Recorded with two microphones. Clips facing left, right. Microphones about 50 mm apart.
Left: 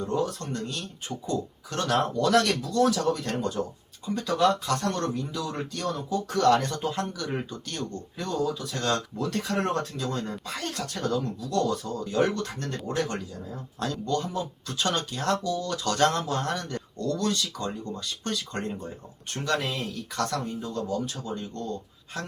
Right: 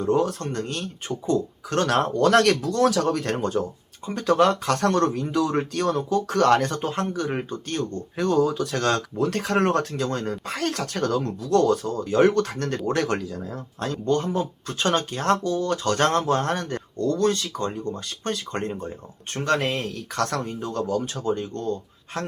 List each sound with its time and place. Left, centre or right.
0.0 s speech: right
3.3 s speech: right
8.2 s speech: right
9.1 s speech: right
13.7 s speech: right